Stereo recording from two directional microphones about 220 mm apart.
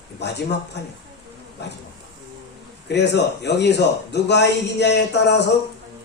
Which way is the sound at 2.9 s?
50° left (ahead or behind).